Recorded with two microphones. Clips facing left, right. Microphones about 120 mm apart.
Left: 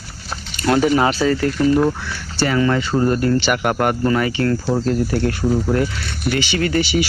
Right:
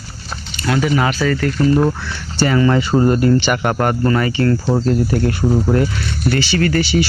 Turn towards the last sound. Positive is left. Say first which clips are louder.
# right 2 dB
turn(degrees=15)  # may be behind; listen again after turning